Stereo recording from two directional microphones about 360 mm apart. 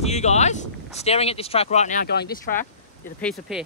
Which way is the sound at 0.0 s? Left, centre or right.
Centre.